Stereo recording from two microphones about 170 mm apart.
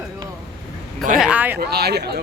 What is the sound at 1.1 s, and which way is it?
Speech, 5° right (ahead or behind).